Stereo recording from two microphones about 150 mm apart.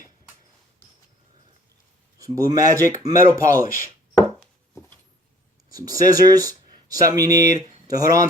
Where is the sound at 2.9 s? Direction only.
25° right (ahead or behind).